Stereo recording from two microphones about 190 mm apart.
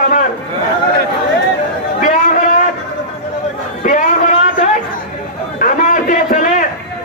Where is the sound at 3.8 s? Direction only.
40° left (ahead or behind).